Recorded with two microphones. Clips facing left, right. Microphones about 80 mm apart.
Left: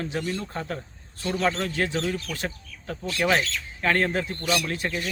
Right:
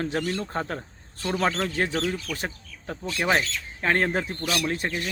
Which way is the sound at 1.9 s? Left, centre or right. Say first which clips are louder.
Even; centre.